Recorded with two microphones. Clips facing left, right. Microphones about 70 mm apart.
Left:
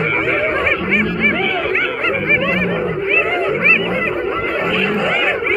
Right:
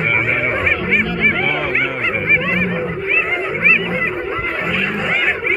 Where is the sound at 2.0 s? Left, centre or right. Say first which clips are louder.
Left 1 dB; centre.